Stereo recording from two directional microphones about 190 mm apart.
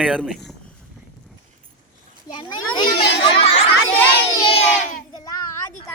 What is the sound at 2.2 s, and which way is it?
Speech, 25° left (ahead or behind).